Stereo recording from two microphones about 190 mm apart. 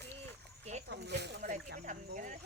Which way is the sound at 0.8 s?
60° right (ahead or behind).